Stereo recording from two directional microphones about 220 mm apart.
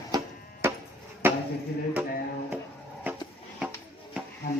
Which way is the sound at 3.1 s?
10° right (ahead or behind).